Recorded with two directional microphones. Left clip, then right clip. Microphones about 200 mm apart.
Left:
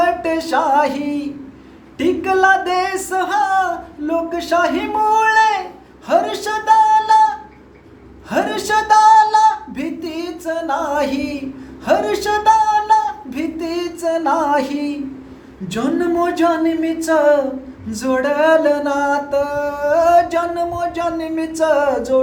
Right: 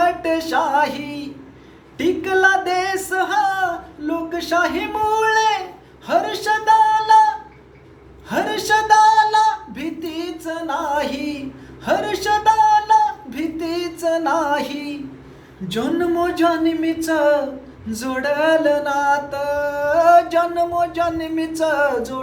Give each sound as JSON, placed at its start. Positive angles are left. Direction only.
{"t": 0.0, "sound": "music", "side_deg": 10}
{"t": 6.1, "sound": "speech", "side_deg": 10}
{"t": 8.3, "sound": "speech", "side_deg": 10}
{"t": 15.7, "sound": "music", "side_deg": 10}